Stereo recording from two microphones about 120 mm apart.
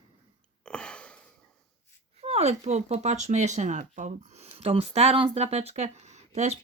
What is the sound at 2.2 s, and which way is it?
Speech, 60° right (ahead or behind).